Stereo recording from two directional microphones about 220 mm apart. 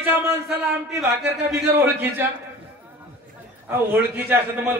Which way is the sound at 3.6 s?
10° right (ahead or behind).